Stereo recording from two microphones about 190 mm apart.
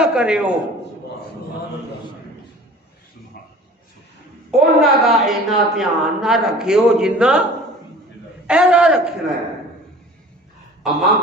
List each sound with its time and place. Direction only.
0.0 s a man's voice: 5° right (ahead or behind)
4.5 s a woman's voice: centre (ahead or behind)
8.5 s a woman's voice: 5° right (ahead or behind)
10.8 s a man's voice: centre (ahead or behind)